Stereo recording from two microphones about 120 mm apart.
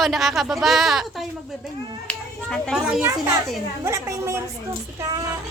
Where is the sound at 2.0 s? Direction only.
5° left (ahead or behind).